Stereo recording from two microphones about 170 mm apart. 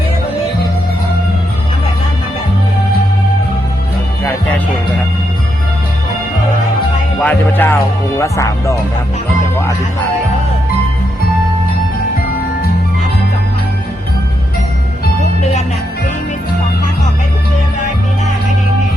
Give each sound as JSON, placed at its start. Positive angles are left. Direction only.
{"t": 7.2, "sound": "music", "side_deg": 10}
{"t": 8.2, "sound": "speech", "side_deg": 20}